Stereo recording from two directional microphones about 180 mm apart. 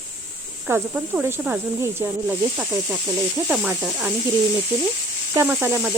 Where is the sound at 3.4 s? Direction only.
10° right (ahead or behind).